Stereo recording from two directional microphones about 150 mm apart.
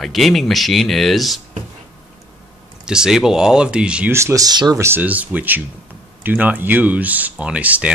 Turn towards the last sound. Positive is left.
turn(degrees=-10)  # may be behind; listen again after turning